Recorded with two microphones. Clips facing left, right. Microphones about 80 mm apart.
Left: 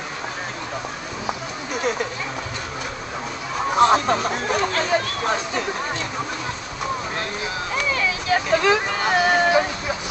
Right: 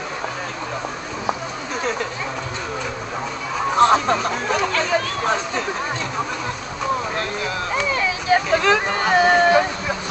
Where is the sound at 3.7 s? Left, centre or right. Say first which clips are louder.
Right 1 dB; centre.